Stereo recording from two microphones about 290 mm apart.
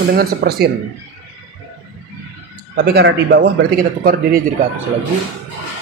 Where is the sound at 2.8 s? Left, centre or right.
Right.